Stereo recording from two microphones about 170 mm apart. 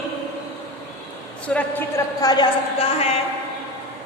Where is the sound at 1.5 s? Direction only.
10° left (ahead or behind).